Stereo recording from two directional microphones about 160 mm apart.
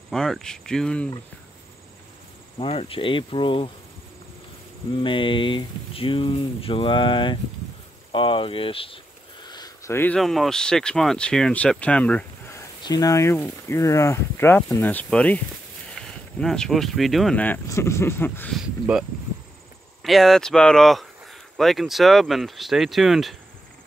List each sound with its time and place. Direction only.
0.1 s speech: 5° left (ahead or behind)
2.6 s speech: 35° left (ahead or behind)
5.0 s speech: 30° left (ahead or behind)
8.1 s a sound: 35° left (ahead or behind)
9.9 s speech: 10° left (ahead or behind)
12.8 s speech: 25° left (ahead or behind)
18.5 s speech: 5° right (ahead or behind)